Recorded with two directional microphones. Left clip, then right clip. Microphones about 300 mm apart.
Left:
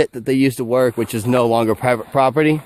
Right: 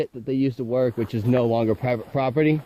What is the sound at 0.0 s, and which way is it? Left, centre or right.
Speech, left.